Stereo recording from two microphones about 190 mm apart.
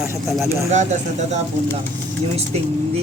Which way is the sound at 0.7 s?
35° right (ahead or behind).